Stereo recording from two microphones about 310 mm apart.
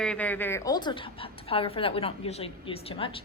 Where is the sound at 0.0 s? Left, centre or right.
Centre.